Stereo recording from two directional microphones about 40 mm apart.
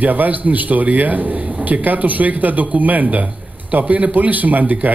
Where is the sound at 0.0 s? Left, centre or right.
Right.